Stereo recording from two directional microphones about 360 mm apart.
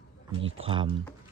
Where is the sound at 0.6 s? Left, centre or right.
Centre.